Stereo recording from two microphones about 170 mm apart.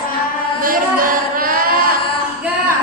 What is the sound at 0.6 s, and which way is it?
Singing, 55° right (ahead or behind).